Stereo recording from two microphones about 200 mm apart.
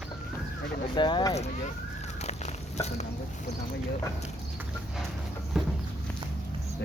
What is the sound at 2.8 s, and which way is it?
Speech, 35° left (ahead or behind).